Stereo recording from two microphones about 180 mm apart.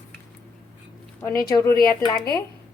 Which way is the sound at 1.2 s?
20° left (ahead or behind).